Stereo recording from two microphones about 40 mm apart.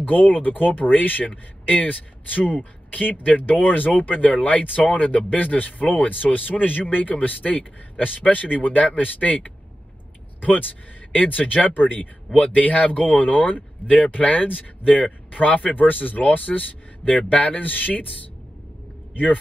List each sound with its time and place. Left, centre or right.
0.0 s a man's voice: left
1.2 s a man's voice: left